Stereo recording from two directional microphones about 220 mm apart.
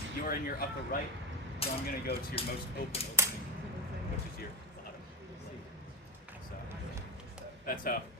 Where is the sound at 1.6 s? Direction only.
25° left (ahead or behind).